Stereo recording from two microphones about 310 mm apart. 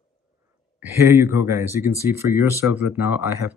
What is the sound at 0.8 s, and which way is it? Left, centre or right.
Speech, centre.